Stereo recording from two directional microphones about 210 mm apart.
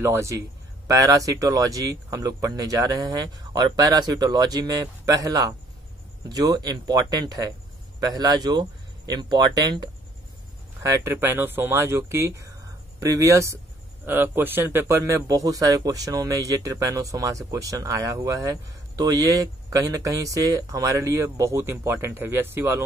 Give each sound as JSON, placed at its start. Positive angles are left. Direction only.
{"t": 0.0, "sound": "speech", "side_deg": -15}